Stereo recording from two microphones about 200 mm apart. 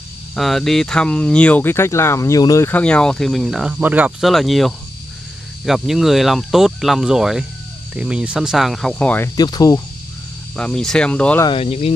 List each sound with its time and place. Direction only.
0.4 s speech: centre (ahead or behind)
9.4 s speech: 20° left (ahead or behind)
10.5 s speech: 5° left (ahead or behind)
11.4 s speech: 30° left (ahead or behind)